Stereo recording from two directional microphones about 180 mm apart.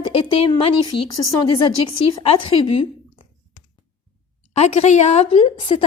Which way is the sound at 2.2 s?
30° left (ahead or behind).